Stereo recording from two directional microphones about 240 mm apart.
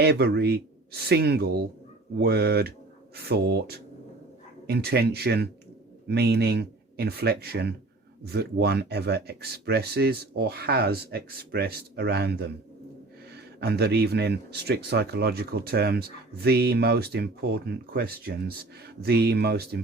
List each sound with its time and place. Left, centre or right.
0.0 s speech: right